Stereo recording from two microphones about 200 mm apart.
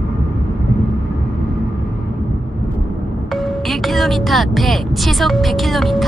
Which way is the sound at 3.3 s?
Centre (ahead or behind).